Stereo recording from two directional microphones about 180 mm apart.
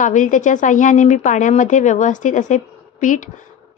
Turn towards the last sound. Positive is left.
turn(degrees=45)  # may be behind; listen again after turning